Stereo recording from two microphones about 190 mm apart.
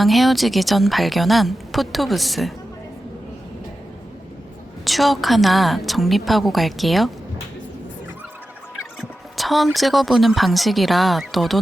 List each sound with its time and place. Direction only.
0.0 s a woman's voice: centre (ahead or behind)
4.9 s a woman's voice: centre (ahead or behind)
8.7 s fowl: centre (ahead or behind)
9.7 s a woman's voice: centre (ahead or behind)